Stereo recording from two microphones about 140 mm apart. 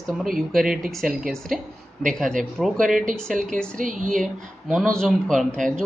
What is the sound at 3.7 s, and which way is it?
Speech, 70° right (ahead or behind).